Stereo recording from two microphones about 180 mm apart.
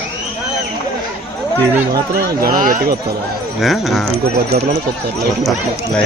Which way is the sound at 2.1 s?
55° right (ahead or behind).